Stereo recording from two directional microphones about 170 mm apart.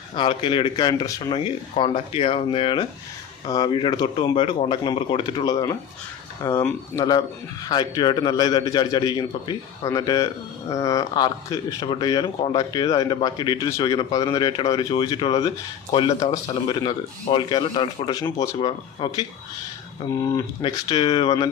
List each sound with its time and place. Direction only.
0.2 s speech: 30° left (ahead or behind)
6.4 s speech: 10° left (ahead or behind)
7.0 s speech: 25° left (ahead or behind)
20.6 s speech: 25° left (ahead or behind)